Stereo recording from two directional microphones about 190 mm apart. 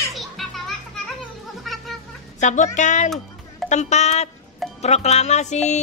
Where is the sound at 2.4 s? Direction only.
40° left (ahead or behind).